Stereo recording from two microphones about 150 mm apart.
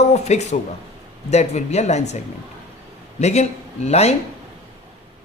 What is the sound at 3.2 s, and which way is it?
Speech, 45° left (ahead or behind).